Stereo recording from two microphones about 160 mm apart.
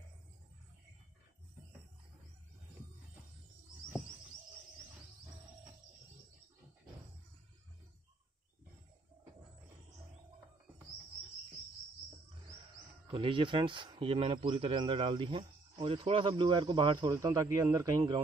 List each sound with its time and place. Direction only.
13.0 s speech: 35° right (ahead or behind)